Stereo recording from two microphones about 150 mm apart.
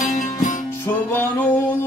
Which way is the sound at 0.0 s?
65° left (ahead or behind).